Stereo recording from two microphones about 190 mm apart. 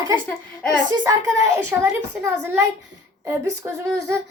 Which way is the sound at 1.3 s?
15° right (ahead or behind).